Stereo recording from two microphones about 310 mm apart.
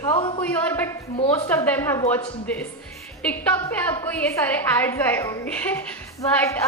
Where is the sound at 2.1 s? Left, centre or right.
Centre.